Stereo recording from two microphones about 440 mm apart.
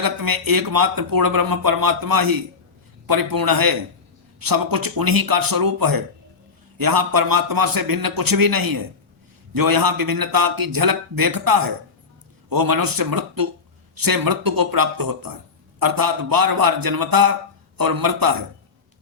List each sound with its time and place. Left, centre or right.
0.0 s speech: right